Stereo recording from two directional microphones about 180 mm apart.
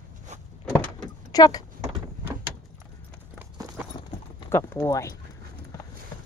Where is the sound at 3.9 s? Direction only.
20° left (ahead or behind).